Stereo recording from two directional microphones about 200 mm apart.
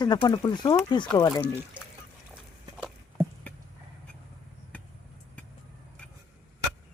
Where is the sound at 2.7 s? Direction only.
5° right (ahead or behind).